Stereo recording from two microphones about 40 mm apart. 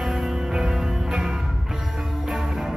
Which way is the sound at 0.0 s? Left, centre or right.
Centre.